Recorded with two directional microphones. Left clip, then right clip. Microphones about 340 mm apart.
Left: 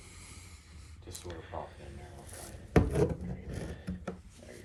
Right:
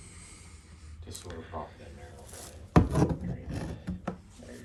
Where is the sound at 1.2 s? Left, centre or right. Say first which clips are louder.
Right 2 dB; centre.